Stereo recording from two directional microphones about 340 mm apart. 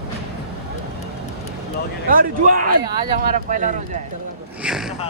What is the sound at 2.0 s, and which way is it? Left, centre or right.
A man's voice, right.